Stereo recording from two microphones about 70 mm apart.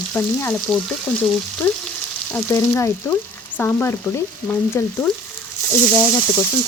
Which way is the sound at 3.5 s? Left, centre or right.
Left.